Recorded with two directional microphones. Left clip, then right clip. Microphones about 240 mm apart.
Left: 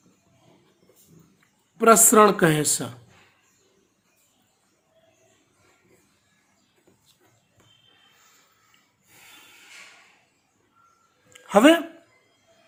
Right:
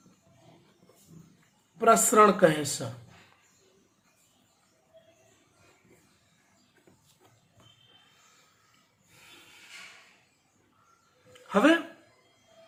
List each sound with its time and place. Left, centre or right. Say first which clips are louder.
1.8 s speech: left 5 dB; left
11.4 s a man's voice: left 7 dB; left